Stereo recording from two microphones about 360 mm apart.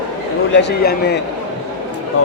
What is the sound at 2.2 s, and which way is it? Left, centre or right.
Speech, left.